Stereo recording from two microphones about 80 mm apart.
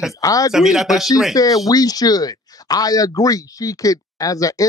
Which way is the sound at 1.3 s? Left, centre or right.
Left.